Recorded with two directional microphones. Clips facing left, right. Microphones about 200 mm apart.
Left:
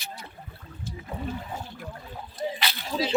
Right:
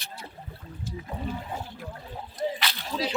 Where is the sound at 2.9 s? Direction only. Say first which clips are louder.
Left 2 dB; 15° left (ahead or behind).